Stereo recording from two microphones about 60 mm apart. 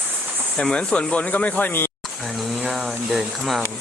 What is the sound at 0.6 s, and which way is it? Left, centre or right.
Speech, centre.